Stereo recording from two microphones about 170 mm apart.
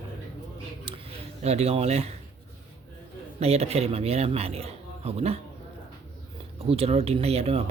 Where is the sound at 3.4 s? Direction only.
40° right (ahead or behind).